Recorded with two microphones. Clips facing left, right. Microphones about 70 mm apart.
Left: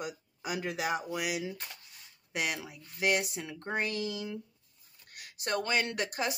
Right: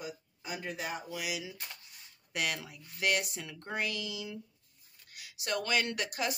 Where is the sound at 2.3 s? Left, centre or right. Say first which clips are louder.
Left 1 dB; centre; by 4.4 s left.